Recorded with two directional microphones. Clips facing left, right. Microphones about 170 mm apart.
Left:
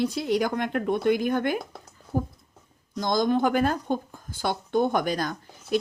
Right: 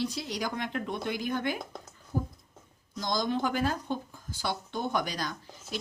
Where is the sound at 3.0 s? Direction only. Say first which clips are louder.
Left 7 dB; 55° left (ahead or behind).